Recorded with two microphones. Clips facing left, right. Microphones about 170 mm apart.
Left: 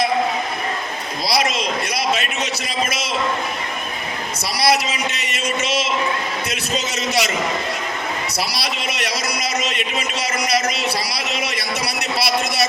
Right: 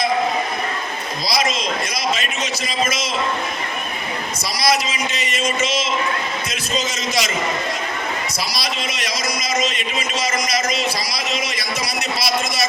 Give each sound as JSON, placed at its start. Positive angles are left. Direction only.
{"t": 1.3, "sound": "a man's voice", "side_deg": 65}
{"t": 4.6, "sound": "a man's voice", "side_deg": 65}
{"t": 8.5, "sound": "a man's voice", "side_deg": 65}